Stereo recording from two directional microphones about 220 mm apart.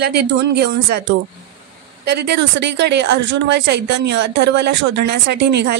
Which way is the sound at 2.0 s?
50° right (ahead or behind).